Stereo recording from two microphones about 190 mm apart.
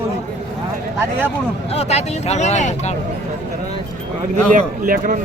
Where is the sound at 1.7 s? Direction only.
35° left (ahead or behind).